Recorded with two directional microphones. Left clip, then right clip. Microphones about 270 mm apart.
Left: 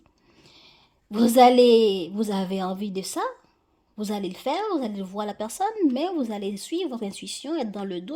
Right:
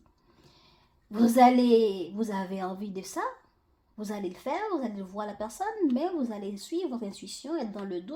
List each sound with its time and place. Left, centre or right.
1.1 s speech: left